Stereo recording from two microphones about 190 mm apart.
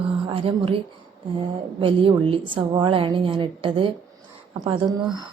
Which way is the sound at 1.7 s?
30° right (ahead or behind).